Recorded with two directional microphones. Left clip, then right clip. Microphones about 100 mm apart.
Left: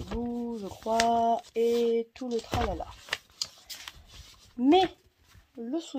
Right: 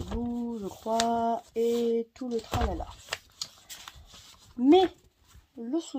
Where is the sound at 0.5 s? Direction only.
20° right (ahead or behind).